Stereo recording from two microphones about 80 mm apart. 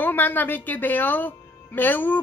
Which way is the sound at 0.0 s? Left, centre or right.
Left.